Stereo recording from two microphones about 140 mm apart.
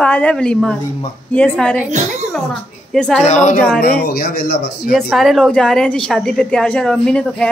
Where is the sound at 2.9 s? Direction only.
5° left (ahead or behind).